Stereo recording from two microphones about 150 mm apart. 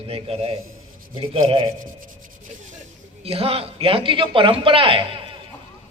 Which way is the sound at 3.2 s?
40° right (ahead or behind).